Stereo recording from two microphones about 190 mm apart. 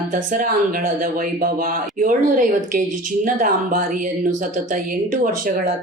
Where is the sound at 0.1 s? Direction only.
45° right (ahead or behind).